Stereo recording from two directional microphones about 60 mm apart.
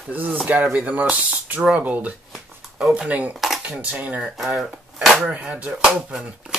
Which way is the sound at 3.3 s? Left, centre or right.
Centre.